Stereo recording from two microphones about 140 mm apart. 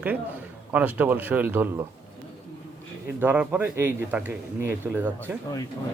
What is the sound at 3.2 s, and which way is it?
A man's voice, 10° right (ahead or behind).